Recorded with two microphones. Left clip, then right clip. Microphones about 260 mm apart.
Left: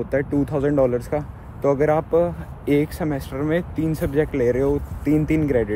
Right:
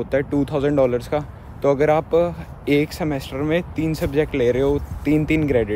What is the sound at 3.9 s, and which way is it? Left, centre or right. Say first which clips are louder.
Speech: right 1 dB; centre.